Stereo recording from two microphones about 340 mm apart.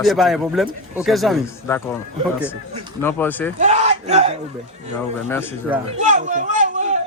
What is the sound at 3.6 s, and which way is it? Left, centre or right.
Speech, centre.